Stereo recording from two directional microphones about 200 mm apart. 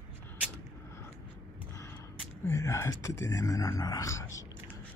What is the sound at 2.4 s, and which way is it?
Speech, 15° left (ahead or behind).